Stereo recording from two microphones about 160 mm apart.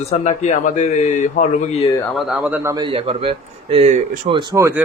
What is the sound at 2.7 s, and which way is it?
A man's voice, 30° right (ahead or behind).